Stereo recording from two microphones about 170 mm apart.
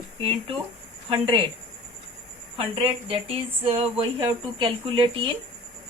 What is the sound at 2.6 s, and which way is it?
Speech, 35° right (ahead or behind).